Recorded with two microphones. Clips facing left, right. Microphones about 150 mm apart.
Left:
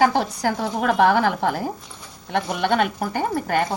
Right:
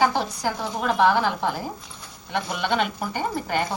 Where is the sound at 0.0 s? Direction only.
55° left (ahead or behind).